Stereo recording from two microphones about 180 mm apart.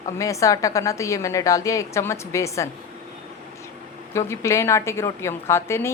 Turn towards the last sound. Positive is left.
turn(degrees=15)  # may be behind; listen again after turning